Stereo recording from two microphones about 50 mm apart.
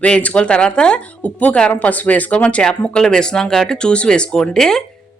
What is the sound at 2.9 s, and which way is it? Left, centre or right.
Speech, centre.